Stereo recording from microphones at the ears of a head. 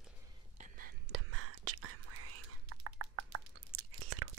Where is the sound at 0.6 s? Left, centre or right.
Right.